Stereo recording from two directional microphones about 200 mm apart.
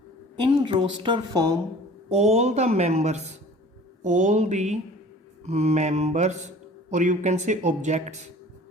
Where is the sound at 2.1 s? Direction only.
35° right (ahead or behind).